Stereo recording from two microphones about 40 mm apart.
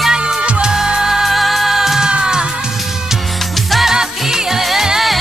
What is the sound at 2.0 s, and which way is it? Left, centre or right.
Music, right.